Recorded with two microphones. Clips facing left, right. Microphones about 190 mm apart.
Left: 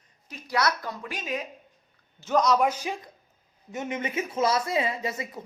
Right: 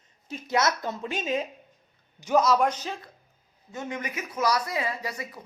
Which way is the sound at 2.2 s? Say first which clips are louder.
Right 2 dB; 10° right (ahead or behind).